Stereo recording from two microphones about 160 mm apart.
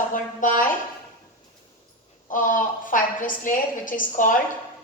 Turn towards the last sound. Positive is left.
turn(degrees=55)  # may be behind; listen again after turning